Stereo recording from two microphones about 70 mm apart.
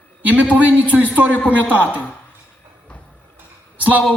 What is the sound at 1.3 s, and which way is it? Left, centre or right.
Speech, left.